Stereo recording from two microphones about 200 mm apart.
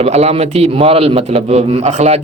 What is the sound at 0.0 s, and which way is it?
Speech, 30° right (ahead or behind).